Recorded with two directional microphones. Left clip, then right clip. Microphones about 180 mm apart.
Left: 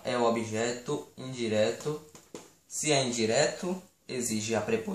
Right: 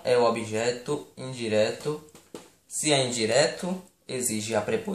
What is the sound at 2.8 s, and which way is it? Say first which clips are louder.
Speech: right 3 dB; 40° right (ahead or behind).